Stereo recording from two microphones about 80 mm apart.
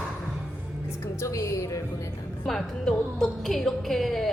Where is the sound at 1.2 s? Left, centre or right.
Left.